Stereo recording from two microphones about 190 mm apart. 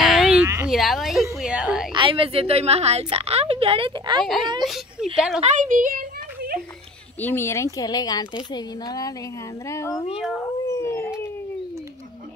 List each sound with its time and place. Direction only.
0.0 s a sound: centre (ahead or behind)
0.7 s a woman's voice: centre (ahead or behind)
1.4 s a sound: 5° right (ahead or behind)
2.0 s a woman's voice: 25° right (ahead or behind)
4.6 s a woman's voice: centre (ahead or behind)
5.4 s a sound: 40° right (ahead or behind)
7.2 s speech: 10° left (ahead or behind)
10.1 s a woman's voice: centre (ahead or behind)
10.7 s howl: 15° left (ahead or behind)